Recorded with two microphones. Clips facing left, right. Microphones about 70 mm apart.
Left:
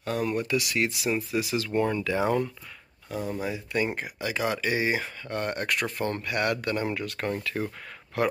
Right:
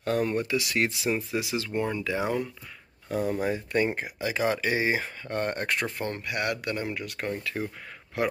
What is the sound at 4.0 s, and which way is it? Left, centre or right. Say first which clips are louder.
Speech: right 1 dB; right.